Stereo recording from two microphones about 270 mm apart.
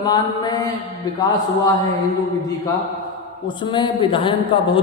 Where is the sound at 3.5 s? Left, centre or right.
Centre.